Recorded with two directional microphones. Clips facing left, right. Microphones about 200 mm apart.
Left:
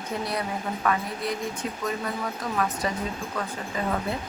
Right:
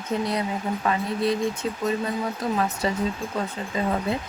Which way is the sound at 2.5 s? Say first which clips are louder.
Right 1 dB; 25° right (ahead or behind).